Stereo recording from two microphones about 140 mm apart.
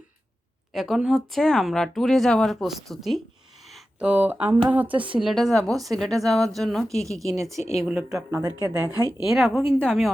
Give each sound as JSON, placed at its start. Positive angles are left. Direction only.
{"t": 0.7, "sound": "speech", "side_deg": 0}
{"t": 3.7, "sound": "speech", "side_deg": -10}
{"t": 5.2, "sound": "speech", "side_deg": 0}
{"t": 8.3, "sound": "speech", "side_deg": -25}
{"t": 9.2, "sound": "speech", "side_deg": 0}